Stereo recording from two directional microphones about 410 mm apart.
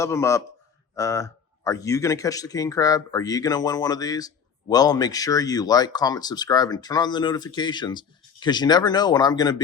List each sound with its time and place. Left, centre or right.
0.0 s speech: centre